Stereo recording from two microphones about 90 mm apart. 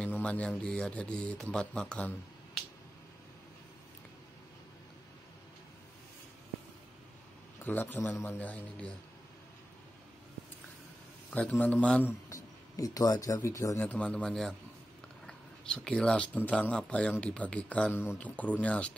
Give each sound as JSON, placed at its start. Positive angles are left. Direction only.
{"t": 0.0, "sound": "speech", "side_deg": 15}
{"t": 7.6, "sound": "a man's voice", "side_deg": 20}
{"t": 11.3, "sound": "speech", "side_deg": 15}
{"t": 12.3, "sound": "speech", "side_deg": 35}
{"t": 13.8, "sound": "speech", "side_deg": 15}